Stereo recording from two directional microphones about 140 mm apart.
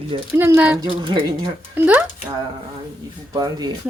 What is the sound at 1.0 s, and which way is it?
Speech, 35° right (ahead or behind).